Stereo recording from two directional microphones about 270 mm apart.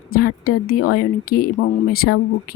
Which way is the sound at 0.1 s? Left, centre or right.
Left.